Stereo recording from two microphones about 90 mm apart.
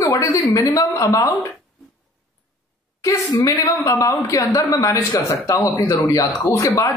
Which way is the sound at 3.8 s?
35° left (ahead or behind).